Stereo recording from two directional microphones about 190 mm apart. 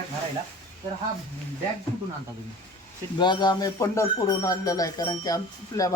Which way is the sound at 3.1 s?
25° left (ahead or behind).